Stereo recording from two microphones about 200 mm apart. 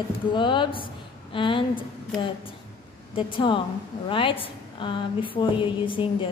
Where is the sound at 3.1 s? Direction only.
25° left (ahead or behind).